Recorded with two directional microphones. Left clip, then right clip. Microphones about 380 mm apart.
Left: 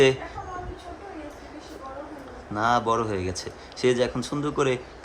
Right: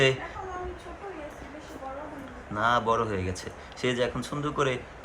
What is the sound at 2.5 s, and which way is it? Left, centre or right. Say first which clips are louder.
Speech: left 2 dB; centre.